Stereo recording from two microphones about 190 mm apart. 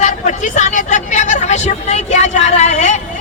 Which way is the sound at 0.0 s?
40° left (ahead or behind).